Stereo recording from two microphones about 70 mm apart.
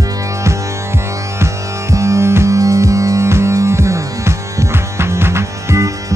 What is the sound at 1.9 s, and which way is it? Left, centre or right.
Music, right.